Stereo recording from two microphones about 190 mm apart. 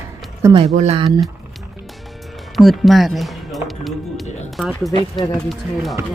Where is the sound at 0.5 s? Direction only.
30° right (ahead or behind).